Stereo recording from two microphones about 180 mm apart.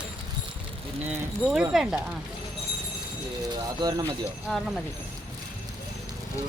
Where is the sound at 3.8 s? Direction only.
20° right (ahead or behind).